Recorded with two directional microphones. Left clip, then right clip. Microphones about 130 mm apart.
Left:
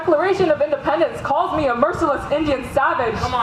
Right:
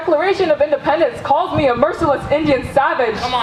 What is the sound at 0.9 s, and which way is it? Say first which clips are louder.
A woman's voice: right 4 dB; 45° right (ahead or behind).